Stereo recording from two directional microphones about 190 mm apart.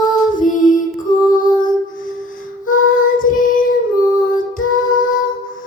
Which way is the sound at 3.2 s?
45° left (ahead or behind).